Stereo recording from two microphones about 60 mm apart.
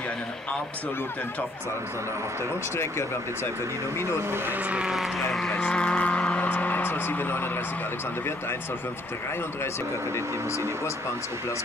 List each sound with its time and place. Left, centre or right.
4.6 s speech: centre
4.9 s speech: centre
5.5 s speech: centre
6.5 s speech: left